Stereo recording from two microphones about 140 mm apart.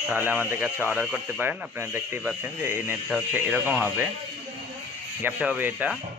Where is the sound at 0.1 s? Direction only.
15° right (ahead or behind).